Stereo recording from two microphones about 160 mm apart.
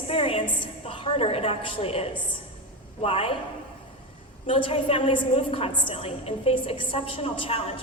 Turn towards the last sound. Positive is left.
turn(degrees=35)  # may be behind; listen again after turning